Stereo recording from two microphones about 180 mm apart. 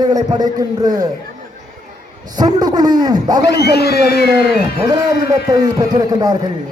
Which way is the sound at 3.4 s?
65° left (ahead or behind).